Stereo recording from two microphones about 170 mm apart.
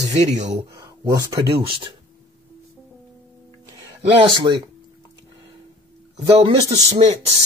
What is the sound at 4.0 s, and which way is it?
Speech, 30° right (ahead or behind).